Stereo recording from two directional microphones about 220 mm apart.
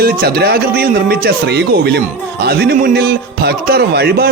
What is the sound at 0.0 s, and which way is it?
A man's voice, 45° right (ahead or behind).